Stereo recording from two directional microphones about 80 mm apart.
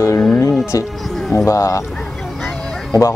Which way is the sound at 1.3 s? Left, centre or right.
Left.